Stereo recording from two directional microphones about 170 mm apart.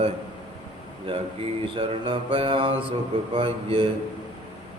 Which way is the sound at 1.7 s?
30° right (ahead or behind).